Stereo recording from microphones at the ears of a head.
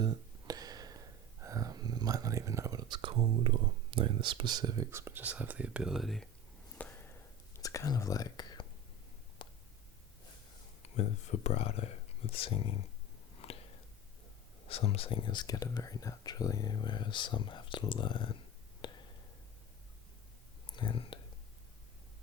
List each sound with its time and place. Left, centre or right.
0.0 s a sound: right
5.8 s speech: centre
7.6 s speech: left
10.8 s speech: left
13.3 s a sound: left
14.6 s speech: left
20.7 s speech: left